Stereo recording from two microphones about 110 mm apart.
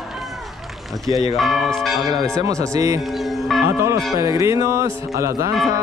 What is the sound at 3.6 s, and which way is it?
Speech, 30° right (ahead or behind).